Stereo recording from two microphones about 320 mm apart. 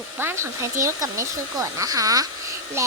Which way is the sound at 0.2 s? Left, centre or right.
Centre.